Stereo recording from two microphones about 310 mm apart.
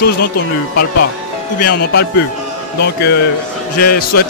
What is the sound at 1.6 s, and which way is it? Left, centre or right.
Speech, left.